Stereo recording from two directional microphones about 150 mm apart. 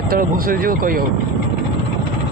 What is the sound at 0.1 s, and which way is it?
Speech, 75° right (ahead or behind).